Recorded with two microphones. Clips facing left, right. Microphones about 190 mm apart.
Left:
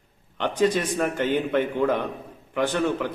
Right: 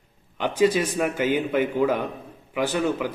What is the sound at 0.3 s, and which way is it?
A man's voice, 5° right (ahead or behind).